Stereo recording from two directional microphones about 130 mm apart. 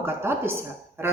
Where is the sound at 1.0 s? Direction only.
20° right (ahead or behind).